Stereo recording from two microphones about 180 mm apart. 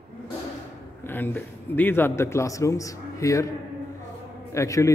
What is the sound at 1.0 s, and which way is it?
A man's voice, 10° left (ahead or behind).